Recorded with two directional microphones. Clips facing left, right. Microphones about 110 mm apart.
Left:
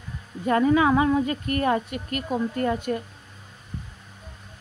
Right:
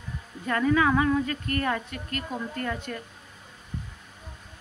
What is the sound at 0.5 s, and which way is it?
Speech, 25° left (ahead or behind).